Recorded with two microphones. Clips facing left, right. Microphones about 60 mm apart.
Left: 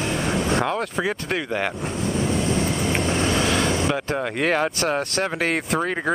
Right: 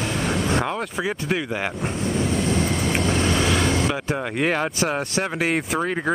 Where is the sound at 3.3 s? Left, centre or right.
Centre.